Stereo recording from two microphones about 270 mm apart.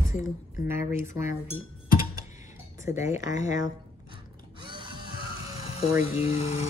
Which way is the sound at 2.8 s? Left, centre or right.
Centre.